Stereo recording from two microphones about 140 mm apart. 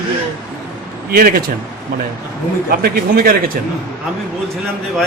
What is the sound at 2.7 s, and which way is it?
Speech, 90° right.